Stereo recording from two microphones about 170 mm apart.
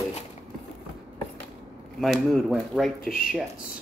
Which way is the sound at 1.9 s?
Centre (ahead or behind).